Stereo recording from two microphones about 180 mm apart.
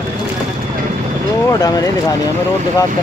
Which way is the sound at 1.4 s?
20° left (ahead or behind).